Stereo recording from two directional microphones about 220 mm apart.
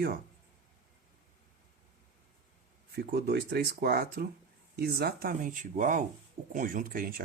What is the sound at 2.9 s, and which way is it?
Speech, 45° right (ahead or behind).